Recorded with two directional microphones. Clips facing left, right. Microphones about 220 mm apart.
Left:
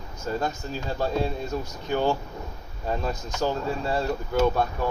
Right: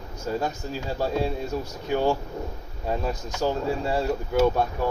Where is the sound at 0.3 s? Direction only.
10° right (ahead or behind).